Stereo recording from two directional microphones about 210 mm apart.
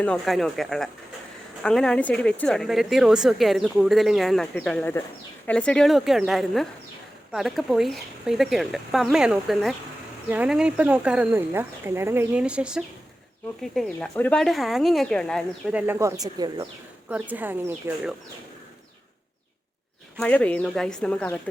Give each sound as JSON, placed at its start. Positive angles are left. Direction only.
{"t": 0.0, "sound": "a woman's voice", "side_deg": 5}
{"t": 15.9, "sound": "speech", "side_deg": -15}
{"t": 17.1, "sound": "speech", "side_deg": -5}
{"t": 20.1, "sound": "a woman's voice", "side_deg": 5}